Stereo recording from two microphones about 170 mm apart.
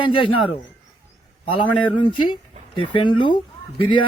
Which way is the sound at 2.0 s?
25° left (ahead or behind).